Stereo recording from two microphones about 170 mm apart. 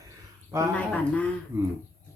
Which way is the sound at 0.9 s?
10° left (ahead or behind).